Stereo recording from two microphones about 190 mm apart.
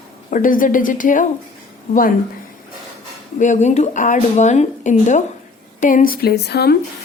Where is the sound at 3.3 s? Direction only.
40° left (ahead or behind); by 6.7 s 55° left (ahead or behind).